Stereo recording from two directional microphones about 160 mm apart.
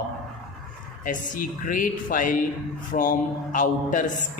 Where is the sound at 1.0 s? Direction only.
55° left (ahead or behind).